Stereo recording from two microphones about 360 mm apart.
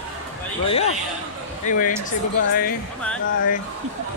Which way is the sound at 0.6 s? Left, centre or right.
Centre.